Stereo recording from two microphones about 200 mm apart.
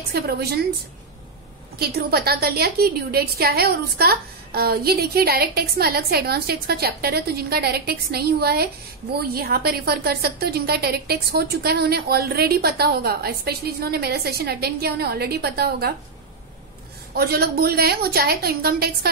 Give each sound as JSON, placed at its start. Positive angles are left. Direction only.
{"t": 0.1, "sound": "a woman's voice", "side_deg": -50}
{"t": 1.8, "sound": "a woman's voice", "side_deg": -50}
{"t": 17.1, "sound": "a woman's voice", "side_deg": -50}